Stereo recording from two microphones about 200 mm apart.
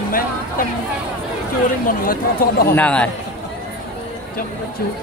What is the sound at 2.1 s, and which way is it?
Speech, 45° left (ahead or behind).